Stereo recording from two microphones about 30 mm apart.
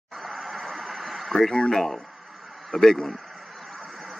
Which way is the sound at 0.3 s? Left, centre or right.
Centre.